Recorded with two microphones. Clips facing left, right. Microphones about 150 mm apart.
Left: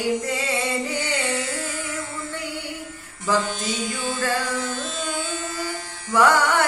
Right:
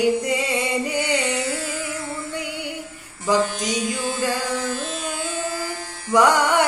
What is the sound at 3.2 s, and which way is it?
Mantra, 15° right (ahead or behind).